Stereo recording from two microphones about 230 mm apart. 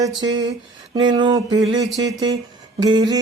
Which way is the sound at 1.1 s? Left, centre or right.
Centre.